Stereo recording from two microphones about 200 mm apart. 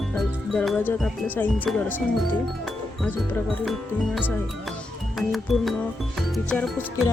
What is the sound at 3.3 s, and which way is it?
Music, centre (ahead or behind).